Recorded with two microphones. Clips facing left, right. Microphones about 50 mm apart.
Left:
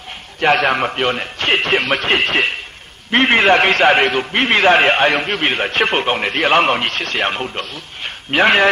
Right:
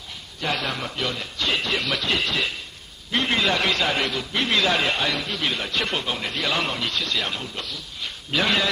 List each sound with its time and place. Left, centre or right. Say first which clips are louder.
0.4 s a man's voice: left 12 dB; left